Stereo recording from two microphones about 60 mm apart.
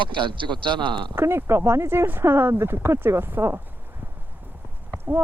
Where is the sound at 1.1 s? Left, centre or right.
Right.